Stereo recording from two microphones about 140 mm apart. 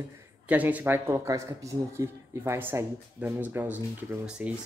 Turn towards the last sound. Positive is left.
turn(degrees=-10)  # may be behind; listen again after turning